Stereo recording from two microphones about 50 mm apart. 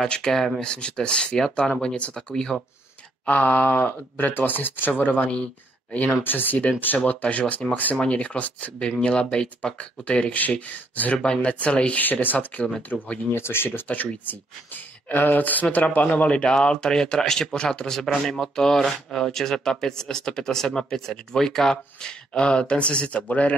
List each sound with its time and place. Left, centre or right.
0.1 s speech: centre
3.3 s speech: left
8.0 s speech: left
8.7 s speech: centre
12.0 s speech: left
13.3 s speech: left
13.8 s speech: left